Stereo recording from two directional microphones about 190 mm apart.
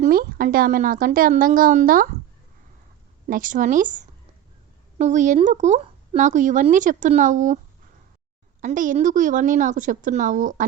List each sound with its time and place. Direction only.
0.0 s a woman's voice: 50° right (ahead or behind)
3.2 s a woman's voice: 45° right (ahead or behind)
8.6 s a woman's voice: 40° right (ahead or behind)